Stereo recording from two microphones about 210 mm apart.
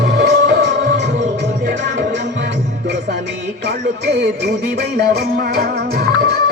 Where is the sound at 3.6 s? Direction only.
55° right (ahead or behind).